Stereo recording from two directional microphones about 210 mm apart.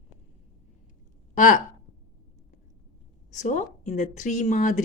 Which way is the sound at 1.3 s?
35° left (ahead or behind).